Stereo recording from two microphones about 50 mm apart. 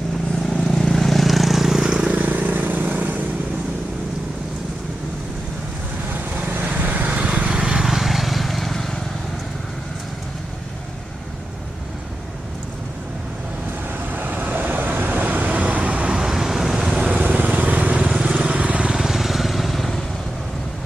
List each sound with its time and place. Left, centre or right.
0.5 s vehicle: centre
2.1 s vehicle: right
6.1 s vehicle: right; by 9.0 s centre
14.1 s vehicle: right
16.3 s vehicle: centre
16.8 s vehicle: right
18.9 s vehicle: centre